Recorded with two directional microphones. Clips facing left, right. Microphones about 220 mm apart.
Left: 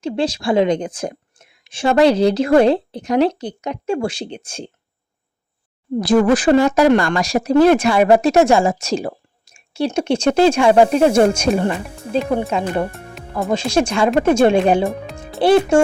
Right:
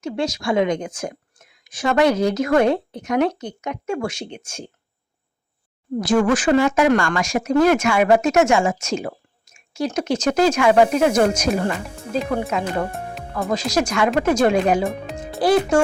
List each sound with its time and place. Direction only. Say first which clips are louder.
0.0 s a woman's voice: left 4 dB; 30° left (ahead or behind)
6.0 s a woman's voice: left 4 dB; 35° left (ahead or behind)
14.8 s speech: left 2 dB; centre (ahead or behind)
15.4 s speech: left 4 dB; 25° left (ahead or behind)